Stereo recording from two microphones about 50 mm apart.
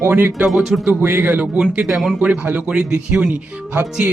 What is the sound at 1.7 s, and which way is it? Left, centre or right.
Speech, right.